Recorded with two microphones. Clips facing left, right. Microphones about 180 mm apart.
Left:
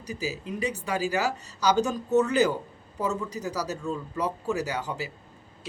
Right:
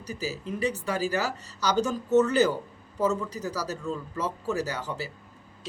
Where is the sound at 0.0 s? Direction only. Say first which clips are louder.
Even; 15° left (ahead or behind).